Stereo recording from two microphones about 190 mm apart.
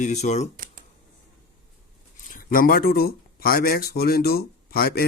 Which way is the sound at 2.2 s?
45° left (ahead or behind).